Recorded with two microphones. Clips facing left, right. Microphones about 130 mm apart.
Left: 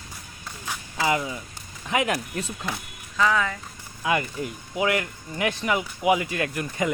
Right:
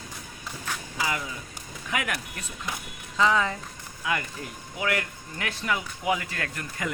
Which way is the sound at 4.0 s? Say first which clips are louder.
Left 5 dB; 25° left (ahead or behind).